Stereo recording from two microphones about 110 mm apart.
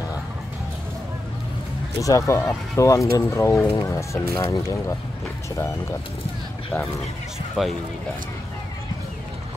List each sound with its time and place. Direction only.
2.0 s speech: 30° left (ahead or behind)
7.6 s speech: centre (ahead or behind)